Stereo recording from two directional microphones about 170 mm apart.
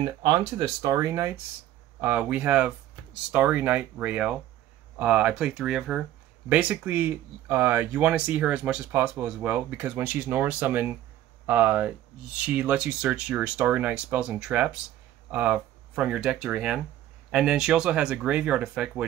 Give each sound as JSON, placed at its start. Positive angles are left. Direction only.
{"t": 0.0, "sound": "speech", "side_deg": -25}